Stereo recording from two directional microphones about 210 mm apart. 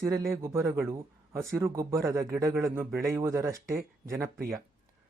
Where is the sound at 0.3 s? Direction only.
10° right (ahead or behind).